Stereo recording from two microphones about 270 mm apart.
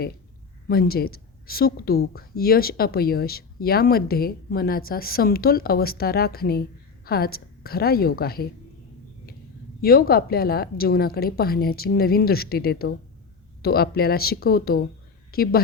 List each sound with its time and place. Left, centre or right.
0.7 s speech: left
9.8 s speech: left